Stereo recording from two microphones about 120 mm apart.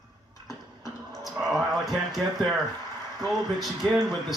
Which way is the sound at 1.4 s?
Centre (ahead or behind).